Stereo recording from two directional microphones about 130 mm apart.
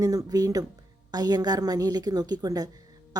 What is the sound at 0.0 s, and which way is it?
A woman's voice, 30° right (ahead or behind).